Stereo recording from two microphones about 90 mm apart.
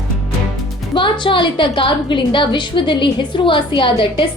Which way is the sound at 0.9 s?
65° left (ahead or behind).